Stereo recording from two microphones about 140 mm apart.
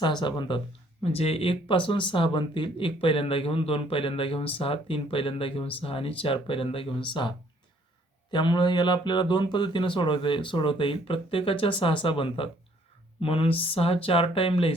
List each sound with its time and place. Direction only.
0.0 s speech: 35° left (ahead or behind)
1.0 s speech: 45° left (ahead or behind)